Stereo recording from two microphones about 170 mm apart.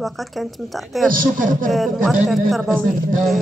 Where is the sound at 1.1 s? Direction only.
50° right (ahead or behind).